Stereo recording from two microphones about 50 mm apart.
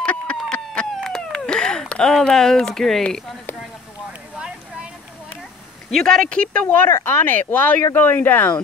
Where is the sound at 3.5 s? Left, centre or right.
Left.